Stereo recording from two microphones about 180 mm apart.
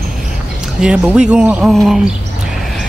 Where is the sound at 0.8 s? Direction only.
5° right (ahead or behind).